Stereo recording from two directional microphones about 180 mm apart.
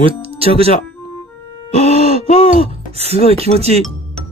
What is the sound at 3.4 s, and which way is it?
Speech, 35° right (ahead or behind).